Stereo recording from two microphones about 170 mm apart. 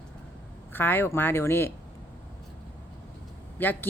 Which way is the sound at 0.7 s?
10° left (ahead or behind).